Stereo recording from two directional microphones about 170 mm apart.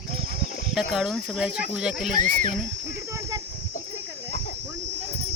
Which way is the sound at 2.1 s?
45° right (ahead or behind).